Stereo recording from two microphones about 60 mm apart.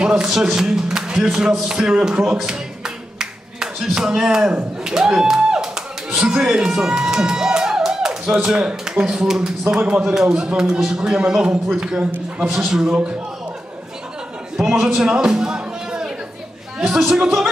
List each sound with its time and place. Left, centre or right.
0.0 s speech: centre
2.3 s a sound: centre
4.8 s speech: centre
9.8 s a man's voice: right
10.0 s speech: centre
14.6 s a man's voice: centre
15.0 s music: centre
17.1 s speech: centre